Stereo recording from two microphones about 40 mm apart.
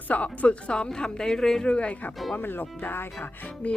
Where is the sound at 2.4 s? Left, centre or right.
Left.